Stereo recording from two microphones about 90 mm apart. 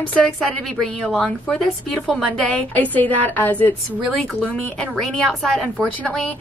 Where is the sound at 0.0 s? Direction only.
15° left (ahead or behind).